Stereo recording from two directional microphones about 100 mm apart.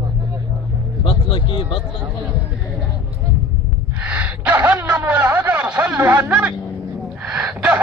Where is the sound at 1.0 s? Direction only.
55° left (ahead or behind).